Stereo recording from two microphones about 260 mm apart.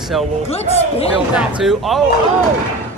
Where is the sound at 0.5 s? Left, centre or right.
Left.